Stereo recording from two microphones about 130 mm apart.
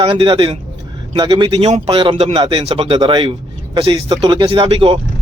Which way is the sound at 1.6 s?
50° right (ahead or behind).